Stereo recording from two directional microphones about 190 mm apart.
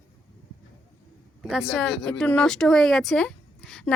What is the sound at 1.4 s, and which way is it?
Speech, centre (ahead or behind).